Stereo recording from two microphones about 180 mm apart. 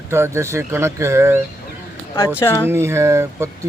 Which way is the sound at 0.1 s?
15° right (ahead or behind).